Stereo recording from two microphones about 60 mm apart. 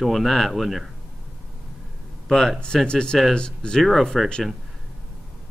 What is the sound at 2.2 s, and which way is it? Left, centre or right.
Speech, centre.